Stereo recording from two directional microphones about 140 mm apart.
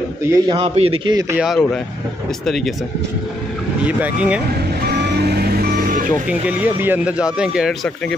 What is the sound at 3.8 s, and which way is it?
Speech, 10° right (ahead or behind).